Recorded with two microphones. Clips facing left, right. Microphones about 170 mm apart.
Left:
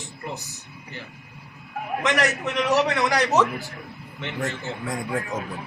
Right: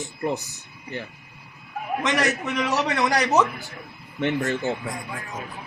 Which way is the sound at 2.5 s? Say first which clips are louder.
Left 3 dB; centre (ahead or behind).